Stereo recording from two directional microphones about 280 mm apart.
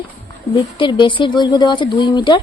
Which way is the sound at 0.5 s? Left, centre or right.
Centre.